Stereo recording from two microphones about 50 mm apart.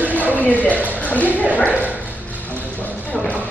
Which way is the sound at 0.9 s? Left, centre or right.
Left.